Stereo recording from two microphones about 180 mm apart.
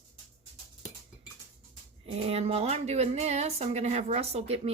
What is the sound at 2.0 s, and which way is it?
A woman's voice, 35° right (ahead or behind).